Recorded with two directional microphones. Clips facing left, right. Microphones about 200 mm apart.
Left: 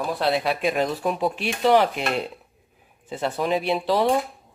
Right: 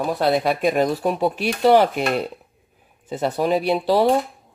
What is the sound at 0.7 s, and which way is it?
Speech, centre (ahead or behind).